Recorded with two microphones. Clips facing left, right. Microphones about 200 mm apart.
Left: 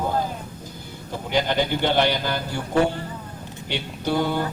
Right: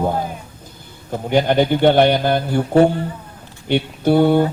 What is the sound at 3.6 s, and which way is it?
Speech, 55° right (ahead or behind).